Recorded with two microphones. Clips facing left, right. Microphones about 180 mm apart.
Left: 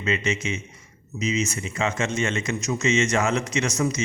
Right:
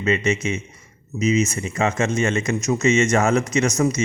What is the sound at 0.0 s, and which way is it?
Speech, 45° right (ahead or behind).